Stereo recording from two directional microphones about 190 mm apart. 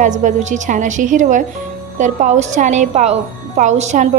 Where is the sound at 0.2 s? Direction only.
40° right (ahead or behind).